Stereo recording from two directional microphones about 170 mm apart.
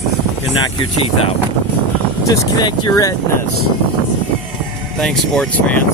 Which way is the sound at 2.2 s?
20° left (ahead or behind).